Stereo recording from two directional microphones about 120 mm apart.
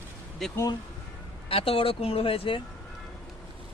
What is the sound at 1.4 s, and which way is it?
Speech, 50° left (ahead or behind).